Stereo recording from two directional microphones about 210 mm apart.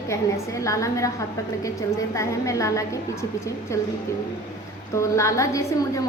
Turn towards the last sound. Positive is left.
turn(degrees=15)  # may be behind; listen again after turning